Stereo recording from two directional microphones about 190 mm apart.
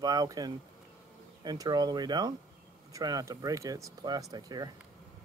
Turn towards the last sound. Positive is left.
turn(degrees=-20)  # may be behind; listen again after turning